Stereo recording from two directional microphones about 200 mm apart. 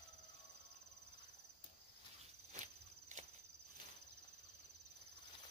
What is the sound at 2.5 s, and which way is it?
Walk, 35° right (ahead or behind).